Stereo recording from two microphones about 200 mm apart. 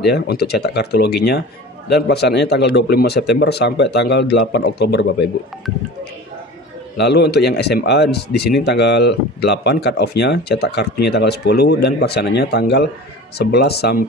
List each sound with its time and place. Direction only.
0.0 s speech: 55° left (ahead or behind)
7.0 s speech: 55° left (ahead or behind)